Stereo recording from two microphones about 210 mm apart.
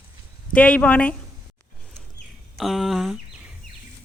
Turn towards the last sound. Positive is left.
turn(degrees=0)  # may be behind; listen again after turning